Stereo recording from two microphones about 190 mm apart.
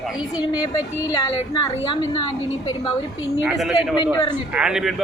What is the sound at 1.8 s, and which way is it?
A woman's voice, 25° left (ahead or behind).